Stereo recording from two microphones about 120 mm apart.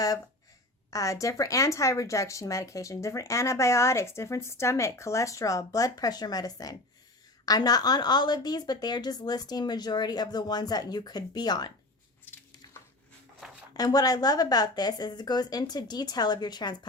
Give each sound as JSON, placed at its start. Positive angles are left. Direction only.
{"t": 0.9, "sound": "a woman's voice", "side_deg": 25}
{"t": 13.7, "sound": "a woman's voice", "side_deg": 30}